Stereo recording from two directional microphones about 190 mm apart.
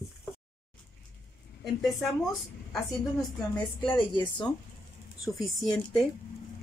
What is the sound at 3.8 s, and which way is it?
Speech, 25° left (ahead or behind).